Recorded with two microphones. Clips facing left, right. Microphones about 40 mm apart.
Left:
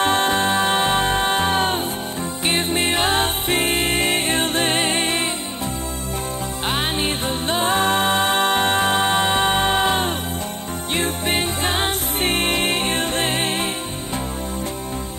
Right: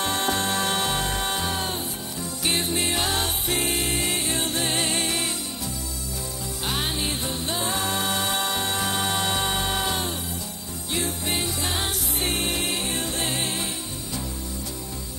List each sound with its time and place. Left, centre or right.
0.0 s music: left
6.7 s music: left